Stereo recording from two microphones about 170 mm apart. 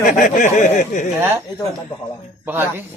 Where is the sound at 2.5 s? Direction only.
10° right (ahead or behind).